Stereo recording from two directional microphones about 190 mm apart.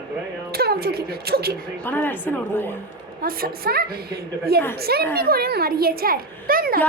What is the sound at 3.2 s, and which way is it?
A woman's voice, 50° right (ahead or behind).